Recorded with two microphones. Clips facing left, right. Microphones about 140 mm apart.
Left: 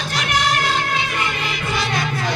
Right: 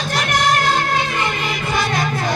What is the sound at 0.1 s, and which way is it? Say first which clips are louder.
Music: right 2 dB; 45° right (ahead or behind).